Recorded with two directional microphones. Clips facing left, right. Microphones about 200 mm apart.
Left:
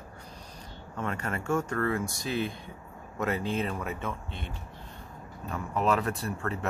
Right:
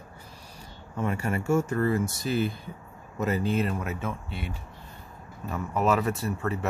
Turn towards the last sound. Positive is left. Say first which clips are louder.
# right 3 dB
turn(degrees=-5)  # may be behind; listen again after turning